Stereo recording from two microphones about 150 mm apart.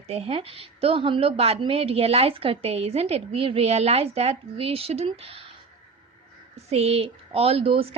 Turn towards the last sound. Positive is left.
turn(degrees=-40)  # may be behind; listen again after turning